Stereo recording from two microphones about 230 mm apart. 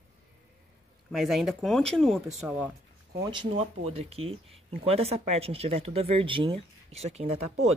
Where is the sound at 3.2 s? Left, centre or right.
Right.